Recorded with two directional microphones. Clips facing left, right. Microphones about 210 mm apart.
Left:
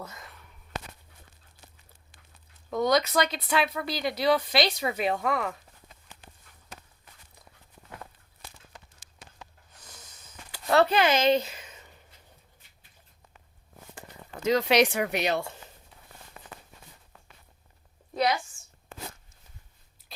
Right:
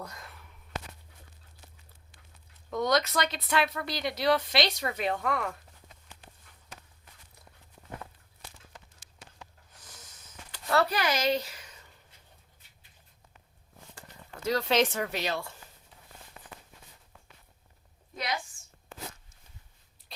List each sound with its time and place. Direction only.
0.0 s speech: centre (ahead or behind)
2.6 s speech: centre (ahead or behind)
9.8 s snort: centre (ahead or behind)
10.7 s a woman's voice: 25° left (ahead or behind)
14.4 s speech: 20° left (ahead or behind)
20.1 s biting: centre (ahead or behind)